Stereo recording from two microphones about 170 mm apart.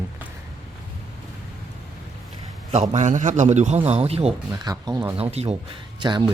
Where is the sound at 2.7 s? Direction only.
45° right (ahead or behind).